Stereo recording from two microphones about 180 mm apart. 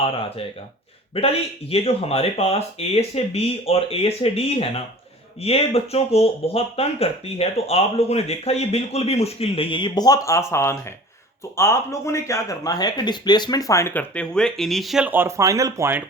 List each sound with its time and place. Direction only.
0.0 s speech: 30° left (ahead or behind); by 16.0 s 15° right (ahead or behind)